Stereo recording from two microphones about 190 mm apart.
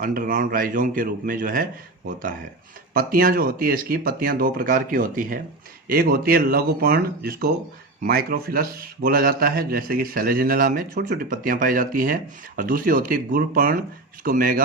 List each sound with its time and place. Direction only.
0.0 s a man's voice: 45° right (ahead or behind)
2.9 s a man's voice: 50° right (ahead or behind)